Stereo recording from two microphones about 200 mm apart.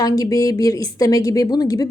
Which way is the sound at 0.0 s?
15° left (ahead or behind).